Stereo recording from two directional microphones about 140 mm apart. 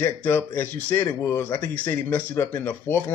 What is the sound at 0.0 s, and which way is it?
A man's voice, 15° left (ahead or behind).